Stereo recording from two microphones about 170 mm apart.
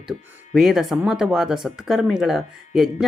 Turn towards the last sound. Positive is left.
turn(degrees=0)  # may be behind; listen again after turning